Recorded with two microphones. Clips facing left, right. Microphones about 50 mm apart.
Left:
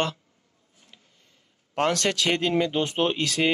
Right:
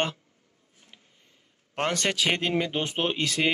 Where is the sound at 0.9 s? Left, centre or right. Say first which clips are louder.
Even; right.